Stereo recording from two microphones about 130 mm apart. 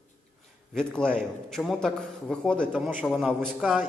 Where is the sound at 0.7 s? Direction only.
5° left (ahead or behind).